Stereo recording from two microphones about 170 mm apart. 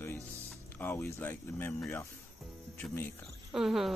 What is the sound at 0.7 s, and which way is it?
Speech, 10° left (ahead or behind).